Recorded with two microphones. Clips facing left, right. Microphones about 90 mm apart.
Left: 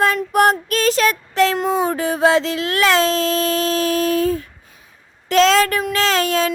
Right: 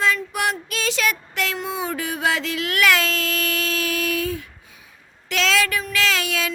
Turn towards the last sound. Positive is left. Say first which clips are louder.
# left 6 dB
turn(degrees=40)  # may be behind; listen again after turning